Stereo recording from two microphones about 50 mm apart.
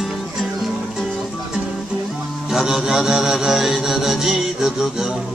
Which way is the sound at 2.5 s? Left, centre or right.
Centre.